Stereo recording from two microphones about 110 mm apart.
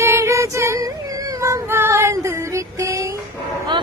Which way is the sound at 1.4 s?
25° right (ahead or behind).